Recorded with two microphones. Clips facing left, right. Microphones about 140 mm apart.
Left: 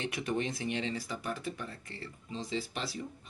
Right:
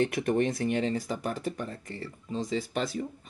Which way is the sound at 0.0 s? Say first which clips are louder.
Right 8 dB; 50° right (ahead or behind).